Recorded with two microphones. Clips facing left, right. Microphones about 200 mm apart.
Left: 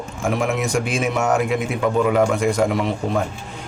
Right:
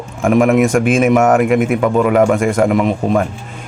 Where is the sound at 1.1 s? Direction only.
90° right.